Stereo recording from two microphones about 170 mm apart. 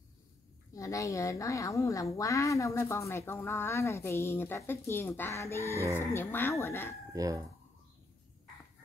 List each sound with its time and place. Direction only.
0.7 s a woman's voice: 20° left (ahead or behind)
7.1 s speech: 20° right (ahead or behind)